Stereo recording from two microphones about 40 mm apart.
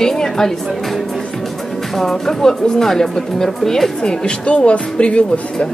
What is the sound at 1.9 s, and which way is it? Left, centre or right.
Speech, centre.